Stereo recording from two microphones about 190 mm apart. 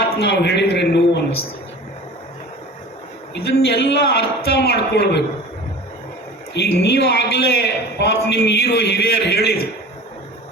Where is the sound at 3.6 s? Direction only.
60° left (ahead or behind).